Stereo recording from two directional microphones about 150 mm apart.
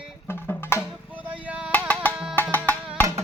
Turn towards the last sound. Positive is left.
turn(degrees=10)  # may be behind; listen again after turning